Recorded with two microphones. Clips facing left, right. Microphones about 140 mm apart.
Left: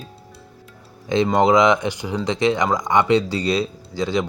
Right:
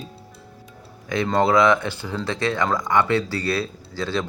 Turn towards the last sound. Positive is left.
turn(degrees=15)  # may be behind; listen again after turning